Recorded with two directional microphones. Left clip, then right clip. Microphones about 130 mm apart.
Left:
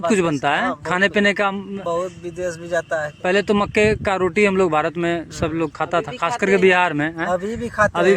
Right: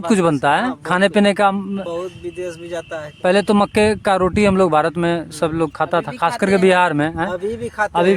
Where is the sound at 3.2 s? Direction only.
55° right (ahead or behind).